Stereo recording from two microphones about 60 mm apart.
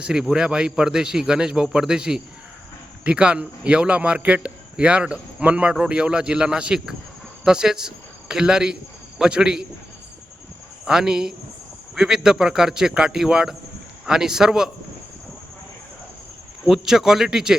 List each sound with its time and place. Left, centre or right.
0.0 s a man's voice: centre
10.8 s a man's voice: centre
16.6 s a man's voice: centre